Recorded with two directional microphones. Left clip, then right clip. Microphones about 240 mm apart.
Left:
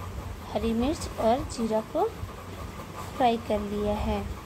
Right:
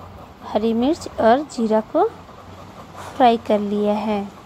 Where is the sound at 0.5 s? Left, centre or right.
Right.